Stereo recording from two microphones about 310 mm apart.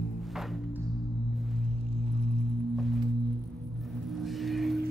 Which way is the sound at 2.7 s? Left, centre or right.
Centre.